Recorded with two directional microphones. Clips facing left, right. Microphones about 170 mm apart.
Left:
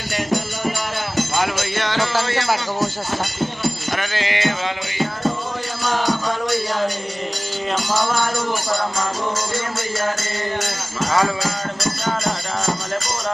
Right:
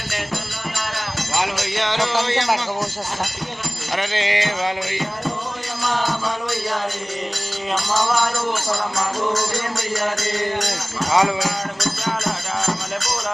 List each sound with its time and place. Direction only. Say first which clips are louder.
1.8 s music: right 1 dB; 20° right (ahead or behind)
3.9 s music: right 1 dB; 25° right (ahead or behind)
11.1 s speech: right 2 dB; 15° right (ahead or behind)